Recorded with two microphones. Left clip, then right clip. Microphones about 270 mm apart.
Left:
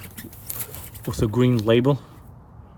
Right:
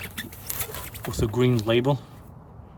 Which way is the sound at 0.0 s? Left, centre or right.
Right.